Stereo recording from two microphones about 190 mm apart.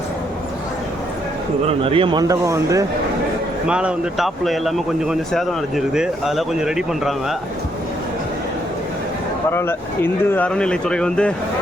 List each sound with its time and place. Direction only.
1.6 s a man's voice: 30° right (ahead or behind)
3.7 s speech: 5° right (ahead or behind)
9.5 s speech: 10° left (ahead or behind)